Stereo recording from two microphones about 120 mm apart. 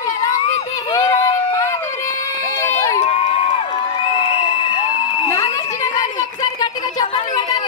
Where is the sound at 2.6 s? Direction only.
20° left (ahead or behind).